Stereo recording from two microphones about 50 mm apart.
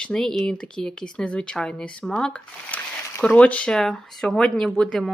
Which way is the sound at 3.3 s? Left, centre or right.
Left.